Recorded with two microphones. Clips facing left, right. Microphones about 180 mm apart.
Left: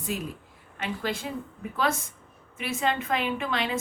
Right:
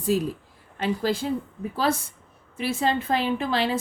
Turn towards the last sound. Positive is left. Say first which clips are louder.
# right 4 dB
turn(degrees=-35)  # may be behind; listen again after turning